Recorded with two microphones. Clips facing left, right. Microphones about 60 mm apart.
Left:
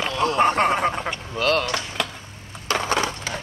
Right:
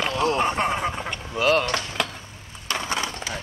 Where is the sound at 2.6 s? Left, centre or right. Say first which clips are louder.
Left 5 dB; left.